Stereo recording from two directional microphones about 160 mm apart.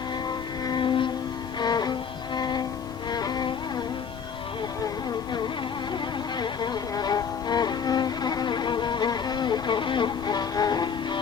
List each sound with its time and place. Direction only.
0.7 s music: 30° left (ahead or behind)
6.4 s music: 25° left (ahead or behind)